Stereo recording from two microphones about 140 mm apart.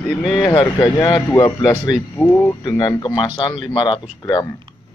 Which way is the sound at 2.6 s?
30° left (ahead or behind).